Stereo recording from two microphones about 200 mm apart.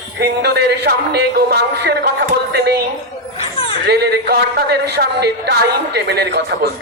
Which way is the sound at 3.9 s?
55° right (ahead or behind).